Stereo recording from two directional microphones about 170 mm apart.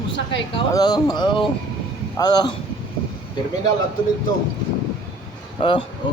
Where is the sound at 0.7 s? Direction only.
25° left (ahead or behind).